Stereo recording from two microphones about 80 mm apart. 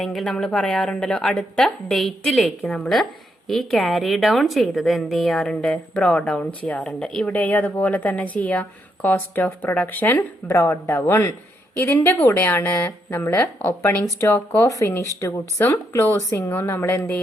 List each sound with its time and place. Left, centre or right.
0.0 s a woman's voice: centre; by 10.2 s left
10.5 s a woman's voice: left
14.0 s a woman's voice: left